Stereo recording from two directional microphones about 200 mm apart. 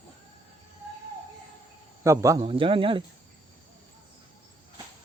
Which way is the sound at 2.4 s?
25° right (ahead or behind).